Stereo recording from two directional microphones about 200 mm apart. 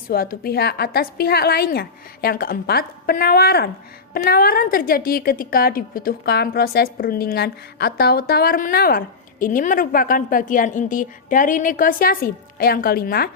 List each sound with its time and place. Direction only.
0.1 s a woman's voice: 50° left (ahead or behind)